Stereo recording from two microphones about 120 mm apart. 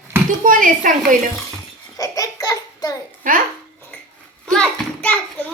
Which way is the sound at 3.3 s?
90° right.